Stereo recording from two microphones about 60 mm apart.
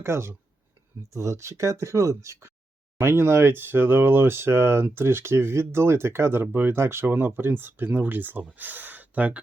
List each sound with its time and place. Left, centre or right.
0.0 s speech: right
1.1 s speech: right
3.0 s speech: right